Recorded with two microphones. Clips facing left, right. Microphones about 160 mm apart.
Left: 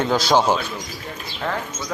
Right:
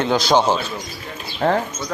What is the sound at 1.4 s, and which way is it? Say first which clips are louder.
Speech: right 8 dB; 40° right (ahead or behind).